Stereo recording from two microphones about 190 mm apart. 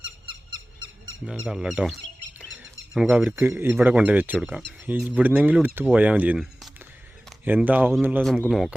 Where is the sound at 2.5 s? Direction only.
90° right.